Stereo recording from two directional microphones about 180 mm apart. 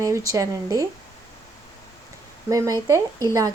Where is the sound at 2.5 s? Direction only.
20° right (ahead or behind).